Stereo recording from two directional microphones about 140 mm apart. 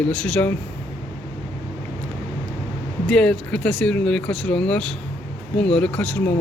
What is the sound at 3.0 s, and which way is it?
Speech, 5° left (ahead or behind).